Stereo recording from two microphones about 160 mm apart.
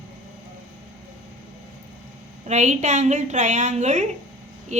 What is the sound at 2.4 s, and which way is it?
A woman's voice, 45° right (ahead or behind).